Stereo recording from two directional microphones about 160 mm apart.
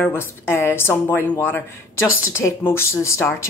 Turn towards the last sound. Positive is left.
turn(degrees=15)  # may be behind; listen again after turning